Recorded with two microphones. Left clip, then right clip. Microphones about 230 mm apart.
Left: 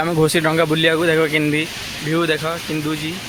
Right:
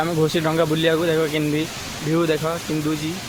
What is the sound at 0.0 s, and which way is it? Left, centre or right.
Speech, left.